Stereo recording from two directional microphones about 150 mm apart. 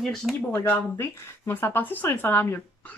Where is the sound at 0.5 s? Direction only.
15° left (ahead or behind).